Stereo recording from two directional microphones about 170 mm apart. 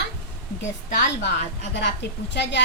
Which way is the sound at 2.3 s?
85° left.